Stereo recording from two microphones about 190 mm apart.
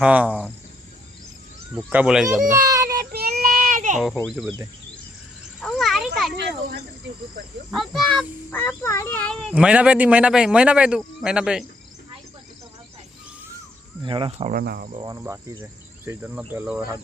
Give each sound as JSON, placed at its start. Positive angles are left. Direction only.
{"t": 0.0, "sound": "insect", "side_deg": -5}
{"t": 1.9, "sound": "insect", "side_deg": -5}
{"t": 2.5, "sound": "a sound", "side_deg": -15}
{"t": 3.0, "sound": "child singing", "side_deg": -55}
{"t": 3.9, "sound": "a child's voice", "side_deg": -5}
{"t": 5.5, "sound": "a sound", "side_deg": 0}
{"t": 6.3, "sound": "speech", "side_deg": -60}
{"t": 7.7, "sound": "a child's voice", "side_deg": 0}
{"t": 14.0, "sound": "speech", "side_deg": -25}
{"t": 14.5, "sound": "cricket", "side_deg": -55}
{"t": 14.8, "sound": "speech", "side_deg": -30}
{"t": 15.1, "sound": "insect", "side_deg": -15}